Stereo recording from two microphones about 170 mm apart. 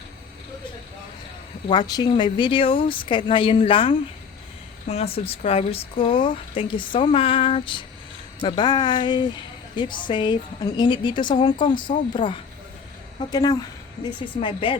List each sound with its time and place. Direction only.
1.6 s a woman's voice: 25° left (ahead or behind)
13.3 s a woman's voice: 25° left (ahead or behind)